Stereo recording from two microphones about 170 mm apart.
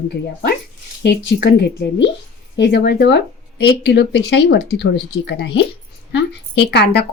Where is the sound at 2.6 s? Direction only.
80° left.